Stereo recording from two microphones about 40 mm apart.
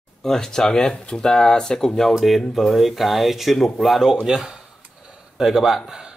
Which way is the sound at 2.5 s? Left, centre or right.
Centre.